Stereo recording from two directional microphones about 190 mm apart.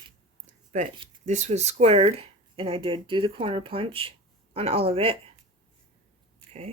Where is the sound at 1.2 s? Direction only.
40° right (ahead or behind).